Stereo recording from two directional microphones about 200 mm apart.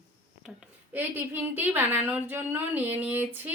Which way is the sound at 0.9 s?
10° right (ahead or behind).